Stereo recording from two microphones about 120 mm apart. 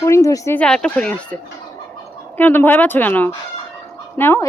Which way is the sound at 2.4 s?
15° left (ahead or behind).